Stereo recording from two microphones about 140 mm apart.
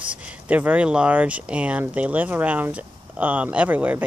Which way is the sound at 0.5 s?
10° right (ahead or behind).